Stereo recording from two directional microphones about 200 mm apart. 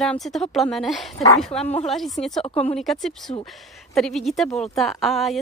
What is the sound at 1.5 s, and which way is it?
Speech, 30° left (ahead or behind).